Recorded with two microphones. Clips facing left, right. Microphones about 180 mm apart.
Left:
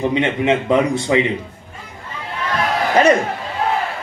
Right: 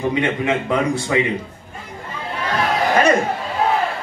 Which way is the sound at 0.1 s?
20° left (ahead or behind).